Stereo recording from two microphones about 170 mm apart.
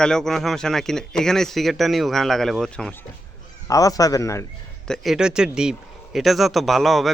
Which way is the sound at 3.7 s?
20° left (ahead or behind).